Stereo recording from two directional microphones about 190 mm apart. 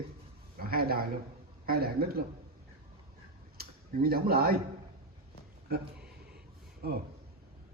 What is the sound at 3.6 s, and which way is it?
Speech, 50° right (ahead or behind).